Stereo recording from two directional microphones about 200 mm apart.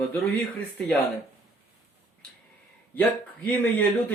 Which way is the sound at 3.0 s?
10° left (ahead or behind).